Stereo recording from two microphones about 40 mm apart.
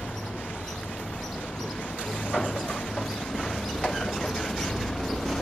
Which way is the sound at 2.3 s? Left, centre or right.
Centre.